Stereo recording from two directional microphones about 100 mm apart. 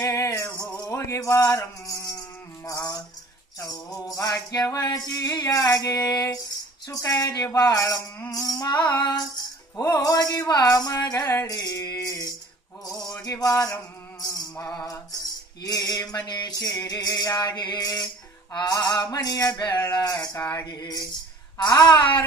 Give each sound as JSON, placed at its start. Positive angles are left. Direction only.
{"t": 0.0, "sound": "music", "side_deg": 30}
{"t": 0.5, "sound": "a sound", "side_deg": 10}
{"t": 0.8, "sound": "music", "side_deg": 30}
{"t": 19.9, "sound": "music", "side_deg": 45}
{"t": 20.3, "sound": "mantra", "side_deg": 25}
{"t": 20.6, "sound": "music", "side_deg": 40}